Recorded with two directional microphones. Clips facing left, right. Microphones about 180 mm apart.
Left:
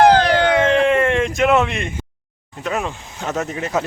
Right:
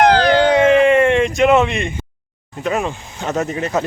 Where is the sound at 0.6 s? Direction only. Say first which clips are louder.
Right 4 dB; centre (ahead or behind).